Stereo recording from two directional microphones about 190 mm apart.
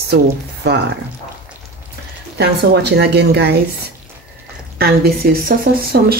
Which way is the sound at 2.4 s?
60° right (ahead or behind).